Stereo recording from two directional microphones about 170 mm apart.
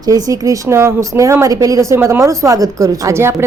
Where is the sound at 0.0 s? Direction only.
20° right (ahead or behind).